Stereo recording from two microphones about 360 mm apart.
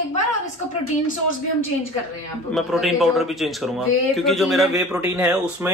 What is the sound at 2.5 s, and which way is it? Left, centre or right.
A man's voice, centre.